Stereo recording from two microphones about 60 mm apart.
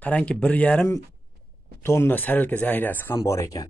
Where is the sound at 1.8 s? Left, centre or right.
Left.